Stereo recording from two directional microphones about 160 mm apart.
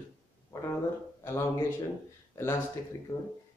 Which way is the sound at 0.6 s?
15° left (ahead or behind).